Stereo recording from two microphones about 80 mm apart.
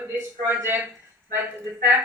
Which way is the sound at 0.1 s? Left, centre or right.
Right.